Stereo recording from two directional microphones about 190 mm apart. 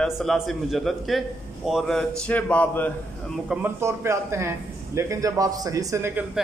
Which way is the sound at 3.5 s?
10° right (ahead or behind).